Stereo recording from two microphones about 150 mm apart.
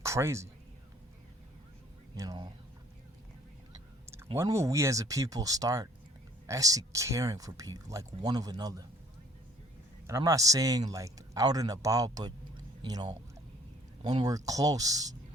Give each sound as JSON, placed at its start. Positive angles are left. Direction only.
{"t": 0.0, "sound": "speech", "side_deg": -20}
{"t": 2.1, "sound": "a sound", "side_deg": -25}
{"t": 4.4, "sound": "speech", "side_deg": -20}
{"t": 10.1, "sound": "speech", "side_deg": -20}